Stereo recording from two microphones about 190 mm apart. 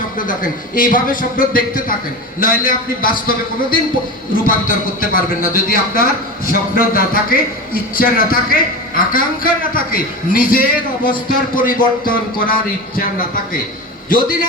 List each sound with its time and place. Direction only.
0.2 s a man's voice: 45° left (ahead or behind)
4.9 s a man's voice: 50° left (ahead or behind)